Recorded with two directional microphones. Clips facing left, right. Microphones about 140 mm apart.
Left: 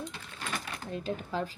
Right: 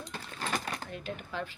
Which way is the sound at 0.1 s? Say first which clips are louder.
Right 3 dB; 45° right (ahead or behind).